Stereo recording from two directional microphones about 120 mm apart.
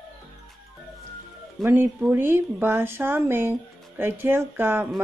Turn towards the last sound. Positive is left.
turn(degrees=-20)  # may be behind; listen again after turning